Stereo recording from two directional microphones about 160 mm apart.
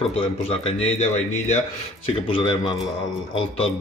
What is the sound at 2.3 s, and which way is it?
A man's voice, 35° left (ahead or behind).